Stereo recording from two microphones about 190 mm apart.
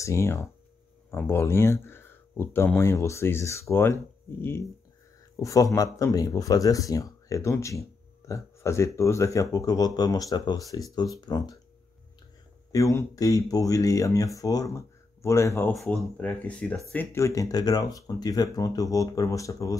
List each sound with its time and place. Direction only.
0.0 s speech: 15° left (ahead or behind)
12.7 s speech: 15° left (ahead or behind)
15.7 s speech: 5° left (ahead or behind)